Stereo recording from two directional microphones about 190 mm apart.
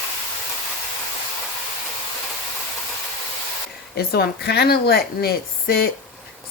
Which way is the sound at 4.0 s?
55° left (ahead or behind).